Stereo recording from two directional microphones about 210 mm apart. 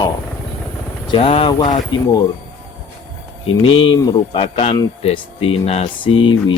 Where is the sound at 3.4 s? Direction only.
75° left (ahead or behind).